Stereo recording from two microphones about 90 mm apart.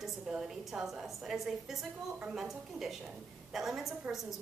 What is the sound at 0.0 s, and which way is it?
A woman's voice, 5° right (ahead or behind).